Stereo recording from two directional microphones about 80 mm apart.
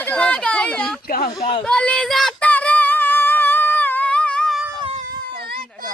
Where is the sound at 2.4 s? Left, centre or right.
Centre.